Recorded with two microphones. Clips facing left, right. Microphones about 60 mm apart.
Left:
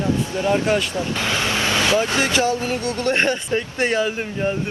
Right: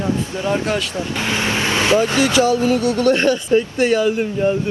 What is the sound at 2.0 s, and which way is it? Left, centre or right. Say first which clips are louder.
Speech: right 4 dB; left.